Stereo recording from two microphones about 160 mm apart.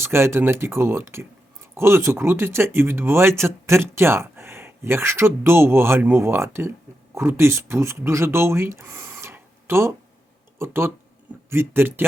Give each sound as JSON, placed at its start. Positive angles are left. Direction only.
{"t": 0.0, "sound": "speech", "side_deg": -15}